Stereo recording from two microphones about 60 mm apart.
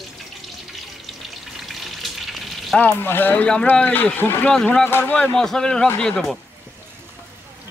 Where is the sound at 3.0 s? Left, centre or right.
Left.